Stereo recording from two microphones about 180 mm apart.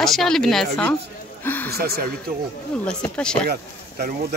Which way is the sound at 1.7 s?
60° right (ahead or behind).